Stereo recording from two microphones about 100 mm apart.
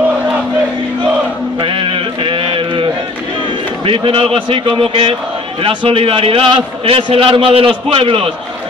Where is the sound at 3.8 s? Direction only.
65° right (ahead or behind).